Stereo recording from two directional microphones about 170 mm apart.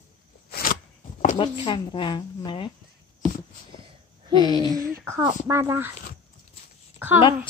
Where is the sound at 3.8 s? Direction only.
30° right (ahead or behind).